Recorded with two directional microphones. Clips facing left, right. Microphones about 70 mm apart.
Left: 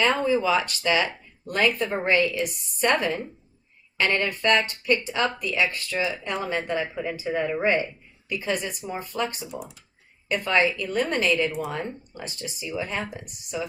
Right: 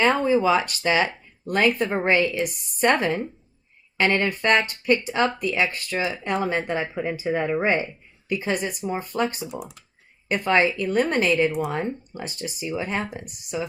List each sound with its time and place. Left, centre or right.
0.0 s speech: right
1.0 s a sound: centre
1.6 s speech: right
3.9 s speech: right
6.2 s speech: right